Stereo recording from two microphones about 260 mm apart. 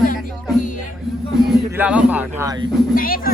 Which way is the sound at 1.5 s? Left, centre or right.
Centre.